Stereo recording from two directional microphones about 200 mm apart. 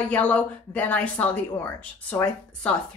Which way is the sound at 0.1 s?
5° left (ahead or behind).